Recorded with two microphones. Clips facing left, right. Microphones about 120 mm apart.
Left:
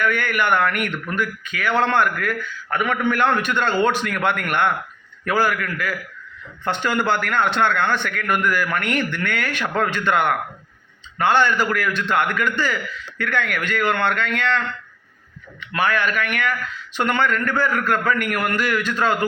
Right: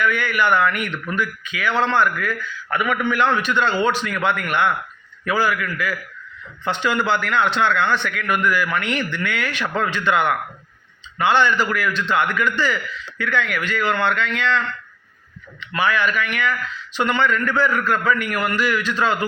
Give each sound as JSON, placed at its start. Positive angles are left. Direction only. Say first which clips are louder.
{"t": 0.0, "sound": "speech", "louder": "right 1 dB", "side_deg": 50}
{"t": 15.6, "sound": "speech", "louder": "right 1 dB", "side_deg": 50}